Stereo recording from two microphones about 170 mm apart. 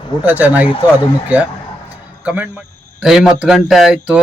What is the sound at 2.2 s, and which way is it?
Speech, 10° right (ahead or behind).